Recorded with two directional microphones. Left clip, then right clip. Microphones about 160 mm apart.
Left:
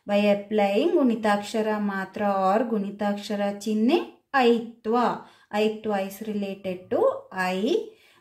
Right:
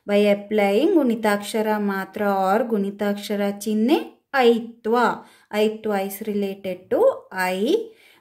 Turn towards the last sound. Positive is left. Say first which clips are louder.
# right 3 dB
turn(degrees=-45)  # may be behind; listen again after turning